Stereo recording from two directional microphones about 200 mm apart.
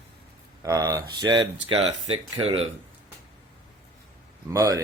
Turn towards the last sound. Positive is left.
turn(degrees=-15)  # may be behind; listen again after turning